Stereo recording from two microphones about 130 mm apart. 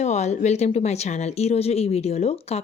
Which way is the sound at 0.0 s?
60° left (ahead or behind).